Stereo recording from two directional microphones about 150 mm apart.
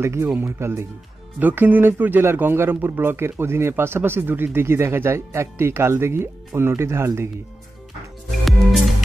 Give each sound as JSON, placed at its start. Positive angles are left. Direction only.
{"t": 0.0, "sound": "speech", "side_deg": -20}
{"t": 8.5, "sound": "music", "side_deg": 0}